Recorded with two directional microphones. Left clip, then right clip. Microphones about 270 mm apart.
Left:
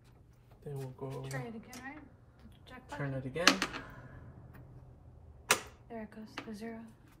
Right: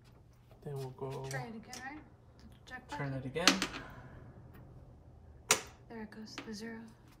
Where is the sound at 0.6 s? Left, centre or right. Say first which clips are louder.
Right 1 dB; centre.